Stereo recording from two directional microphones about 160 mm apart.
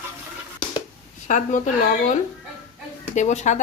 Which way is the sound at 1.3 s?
50° left (ahead or behind).